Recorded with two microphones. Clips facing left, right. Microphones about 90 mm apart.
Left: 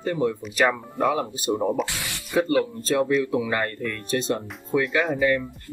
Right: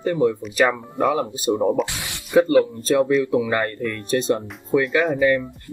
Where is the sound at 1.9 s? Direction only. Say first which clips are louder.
Right 1 dB; 20° right (ahead or behind).